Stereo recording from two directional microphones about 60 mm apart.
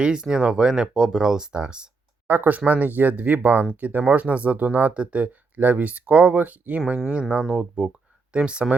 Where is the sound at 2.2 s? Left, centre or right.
Right.